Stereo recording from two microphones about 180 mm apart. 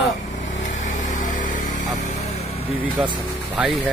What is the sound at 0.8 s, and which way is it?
Vehicle, 45° left (ahead or behind).